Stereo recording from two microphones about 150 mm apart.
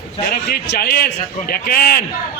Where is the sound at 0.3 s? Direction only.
90° left.